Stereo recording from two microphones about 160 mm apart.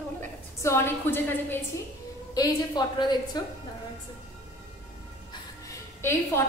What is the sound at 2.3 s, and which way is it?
Speech, 25° left (ahead or behind).